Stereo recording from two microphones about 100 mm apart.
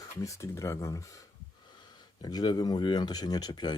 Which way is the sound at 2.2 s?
45° left (ahead or behind).